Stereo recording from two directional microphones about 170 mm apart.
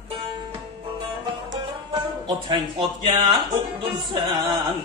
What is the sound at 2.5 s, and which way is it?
Speech, 25° right (ahead or behind).